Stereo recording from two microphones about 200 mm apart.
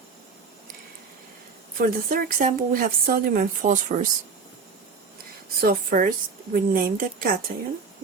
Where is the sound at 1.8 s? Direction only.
45° right (ahead or behind).